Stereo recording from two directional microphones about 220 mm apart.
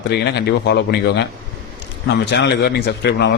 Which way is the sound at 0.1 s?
50° left (ahead or behind).